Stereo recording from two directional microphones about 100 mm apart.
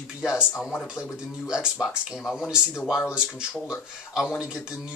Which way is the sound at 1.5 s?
5° right (ahead or behind).